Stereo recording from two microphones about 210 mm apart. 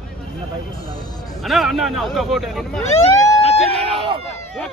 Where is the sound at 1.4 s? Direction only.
Centre (ahead or behind).